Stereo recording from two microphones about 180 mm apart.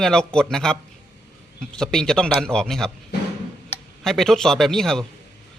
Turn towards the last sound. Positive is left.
turn(degrees=0)  # may be behind; listen again after turning